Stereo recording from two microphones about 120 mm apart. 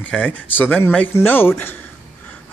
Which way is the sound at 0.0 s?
10° left (ahead or behind).